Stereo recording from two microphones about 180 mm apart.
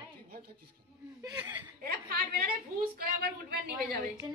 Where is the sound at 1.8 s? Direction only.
60° right (ahead or behind).